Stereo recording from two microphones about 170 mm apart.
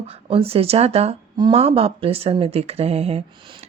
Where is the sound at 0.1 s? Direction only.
35° right (ahead or behind).